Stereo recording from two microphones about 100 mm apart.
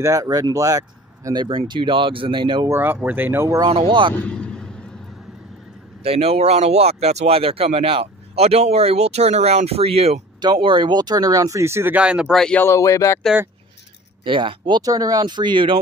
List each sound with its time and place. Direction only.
0.0 s speech: 35° right (ahead or behind)
1.7 s speech: 55° right (ahead or behind)
2.7 s speech: 20° right (ahead or behind)
3.6 s speech: 55° right (ahead or behind)
4.1 s a sound: 15° left (ahead or behind)
6.0 s speech: 85° right
10.4 s speech: 50° right (ahead or behind); by 11.9 s 25° right (ahead or behind)
11.9 s speech: 10° right (ahead or behind)
12.5 s speech: 30° left (ahead or behind)
14.2 s speech: 55° right (ahead or behind)
14.8 s speech: 35° right (ahead or behind); by 15.8 s 55° right (ahead or behind)